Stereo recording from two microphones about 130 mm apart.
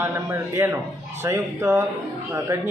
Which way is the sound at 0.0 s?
20° right (ahead or behind).